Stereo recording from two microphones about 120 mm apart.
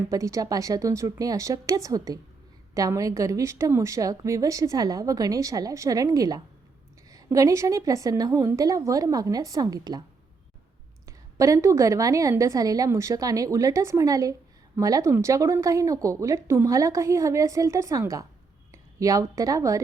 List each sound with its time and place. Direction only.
0.0 s a woman's voice: 25° right (ahead or behind)
11.0 s a woman's voice: 25° right (ahead or behind)